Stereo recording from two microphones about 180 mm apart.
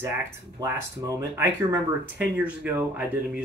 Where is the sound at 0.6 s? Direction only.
15° right (ahead or behind).